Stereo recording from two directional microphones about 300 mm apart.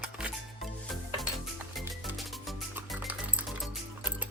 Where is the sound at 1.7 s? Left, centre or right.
Centre.